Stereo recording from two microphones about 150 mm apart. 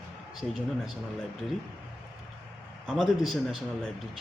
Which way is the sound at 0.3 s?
Centre (ahead or behind).